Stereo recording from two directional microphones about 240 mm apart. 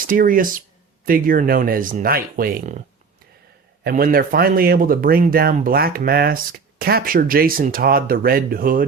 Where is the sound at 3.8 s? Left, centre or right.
Right.